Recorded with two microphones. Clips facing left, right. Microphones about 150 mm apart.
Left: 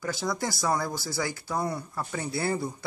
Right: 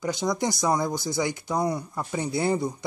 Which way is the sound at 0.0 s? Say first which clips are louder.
Right 4 dB; 20° right (ahead or behind).